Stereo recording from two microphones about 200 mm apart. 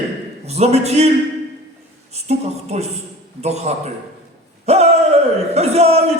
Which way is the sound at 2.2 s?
35° right (ahead or behind).